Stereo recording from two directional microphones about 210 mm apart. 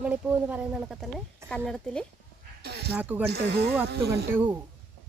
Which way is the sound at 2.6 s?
50° right (ahead or behind).